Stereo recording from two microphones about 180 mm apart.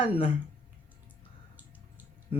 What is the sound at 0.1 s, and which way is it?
Speech, 30° left (ahead or behind).